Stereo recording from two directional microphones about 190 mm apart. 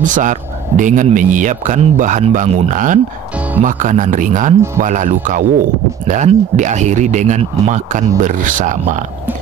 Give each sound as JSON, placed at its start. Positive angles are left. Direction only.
{"t": 0.0, "sound": "speech", "side_deg": -40}